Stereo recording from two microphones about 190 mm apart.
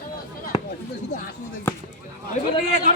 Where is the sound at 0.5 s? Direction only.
20° left (ahead or behind).